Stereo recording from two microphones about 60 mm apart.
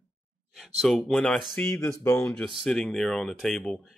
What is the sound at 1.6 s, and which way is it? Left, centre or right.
Speech, left.